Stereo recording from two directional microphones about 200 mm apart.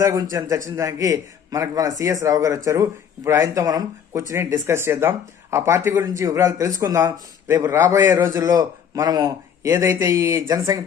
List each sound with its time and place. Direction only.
0.0 s a man's voice: 15° right (ahead or behind)